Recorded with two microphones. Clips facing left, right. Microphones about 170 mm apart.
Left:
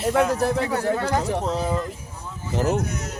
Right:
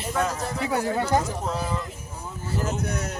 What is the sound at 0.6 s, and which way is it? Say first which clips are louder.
Speech: left 2 dB; 15° right (ahead or behind).